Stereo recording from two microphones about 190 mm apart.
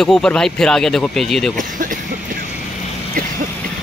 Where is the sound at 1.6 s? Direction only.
45° right (ahead or behind).